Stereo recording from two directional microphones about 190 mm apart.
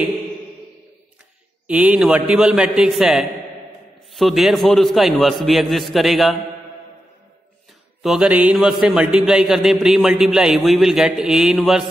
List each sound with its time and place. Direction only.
1.7 s speech: 5° right (ahead or behind)
8.0 s speech: 5° right (ahead or behind)